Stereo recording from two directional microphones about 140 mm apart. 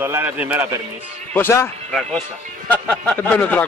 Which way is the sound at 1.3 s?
15° left (ahead or behind).